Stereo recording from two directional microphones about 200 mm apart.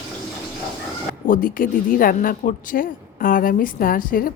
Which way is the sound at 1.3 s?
45° left (ahead or behind).